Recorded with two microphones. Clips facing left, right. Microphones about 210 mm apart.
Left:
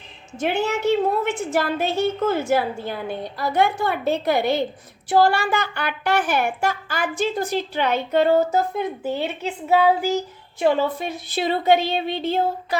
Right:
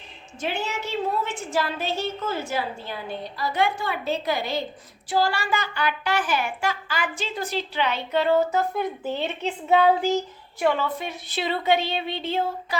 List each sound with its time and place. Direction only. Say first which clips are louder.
0.3 s a woman's voice: left 7 dB; 55° left (ahead or behind)
8.7 s a woman's voice: left 2 dB; 10° left (ahead or behind)
10.8 s speech: left 5 dB; 40° left (ahead or behind)